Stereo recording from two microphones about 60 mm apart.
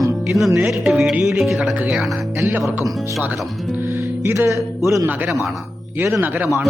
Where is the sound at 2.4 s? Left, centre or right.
Right.